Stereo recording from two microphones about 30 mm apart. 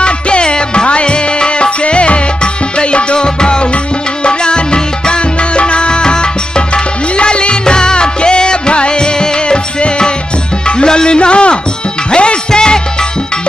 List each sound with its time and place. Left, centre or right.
0.0 s music: left
12.4 s music: left